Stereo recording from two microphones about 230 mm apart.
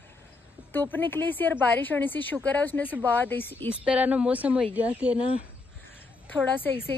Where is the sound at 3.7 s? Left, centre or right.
Centre.